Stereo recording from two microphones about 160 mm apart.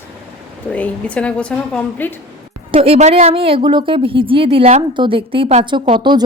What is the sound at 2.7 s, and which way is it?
A woman's voice, 40° right (ahead or behind).